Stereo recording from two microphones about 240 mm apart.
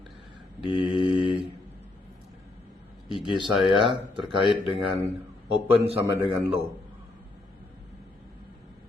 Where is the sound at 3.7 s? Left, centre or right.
Right.